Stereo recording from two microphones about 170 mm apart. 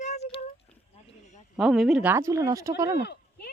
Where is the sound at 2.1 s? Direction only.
15° right (ahead or behind).